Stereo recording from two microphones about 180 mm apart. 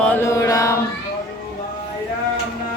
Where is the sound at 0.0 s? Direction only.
10° left (ahead or behind).